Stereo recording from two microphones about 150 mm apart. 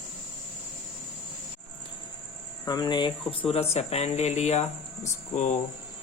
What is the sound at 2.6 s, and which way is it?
Speech, 25° left (ahead or behind).